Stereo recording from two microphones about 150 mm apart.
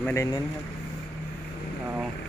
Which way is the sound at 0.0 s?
20° left (ahead or behind).